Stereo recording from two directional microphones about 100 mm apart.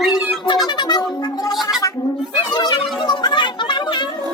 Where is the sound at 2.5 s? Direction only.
45° left (ahead or behind).